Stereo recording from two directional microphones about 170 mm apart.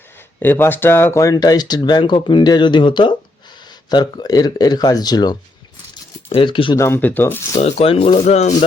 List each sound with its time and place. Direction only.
0.3 s speech: 10° left (ahead or behind); by 6.7 s 30° left (ahead or behind)
6.7 s speech: 15° left (ahead or behind)
7.6 s speech: 35° left (ahead or behind)